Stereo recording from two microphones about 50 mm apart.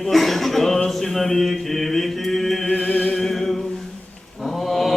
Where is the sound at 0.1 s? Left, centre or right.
Centre.